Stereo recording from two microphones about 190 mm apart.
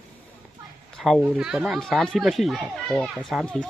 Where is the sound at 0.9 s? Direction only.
Centre (ahead or behind).